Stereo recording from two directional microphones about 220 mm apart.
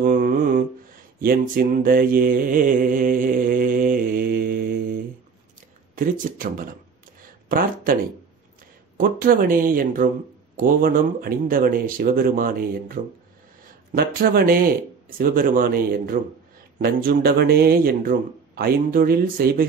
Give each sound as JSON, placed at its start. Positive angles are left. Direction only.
{"t": 0.0, "sound": "mantra", "side_deg": -40}
{"t": 5.9, "sound": "speech", "side_deg": -40}